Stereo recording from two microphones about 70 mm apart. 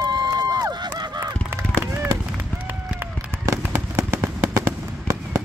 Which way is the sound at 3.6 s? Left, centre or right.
Right.